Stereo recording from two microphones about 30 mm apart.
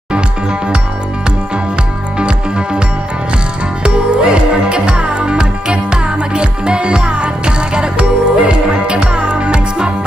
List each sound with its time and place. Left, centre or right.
2.1 s music: right
3.8 s music: right